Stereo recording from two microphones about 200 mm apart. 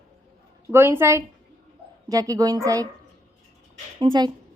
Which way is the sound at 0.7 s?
10° right (ahead or behind).